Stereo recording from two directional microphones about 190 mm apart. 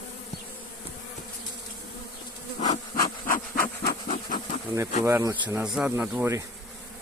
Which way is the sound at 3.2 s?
50° left (ahead or behind).